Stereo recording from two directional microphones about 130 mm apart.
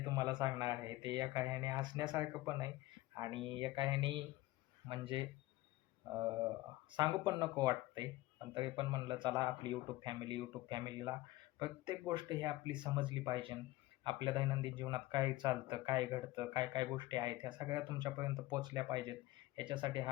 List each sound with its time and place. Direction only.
0.0 s speech: 30° right (ahead or behind)
2.1 s speech: 25° right (ahead or behind)
3.3 s speech: 40° right (ahead or behind)
6.9 s speech: 30° right (ahead or behind)